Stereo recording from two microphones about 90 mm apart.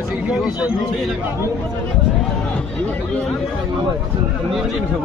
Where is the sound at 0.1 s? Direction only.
5° right (ahead or behind).